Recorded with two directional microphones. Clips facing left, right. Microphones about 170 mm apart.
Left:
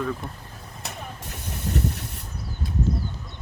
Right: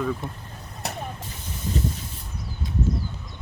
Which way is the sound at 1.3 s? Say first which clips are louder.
Left 4 dB; 70° left (ahead or behind).